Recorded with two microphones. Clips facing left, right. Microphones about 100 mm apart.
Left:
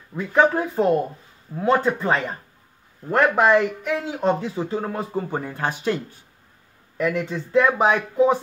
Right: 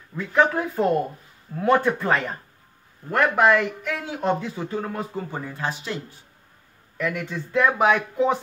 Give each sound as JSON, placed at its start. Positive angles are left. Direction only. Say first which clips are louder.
{"t": 0.1, "sound": "speech", "louder": "left 2 dB", "side_deg": 15}
{"t": 5.6, "sound": "speech", "louder": "left 5 dB", "side_deg": 55}
{"t": 7.2, "sound": "speech", "louder": "left 3 dB", "side_deg": 20}